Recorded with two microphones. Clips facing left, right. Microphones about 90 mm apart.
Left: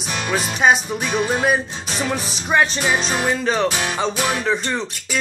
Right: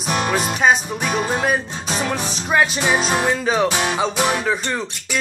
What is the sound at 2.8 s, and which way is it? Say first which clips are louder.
Music: right 2 dB; 15° right (ahead or behind).